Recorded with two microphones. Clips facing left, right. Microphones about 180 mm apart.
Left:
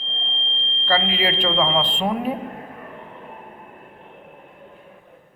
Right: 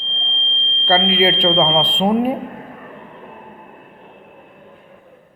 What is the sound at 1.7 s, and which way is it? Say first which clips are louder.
Speech: right 6 dB; 10° right (ahead or behind).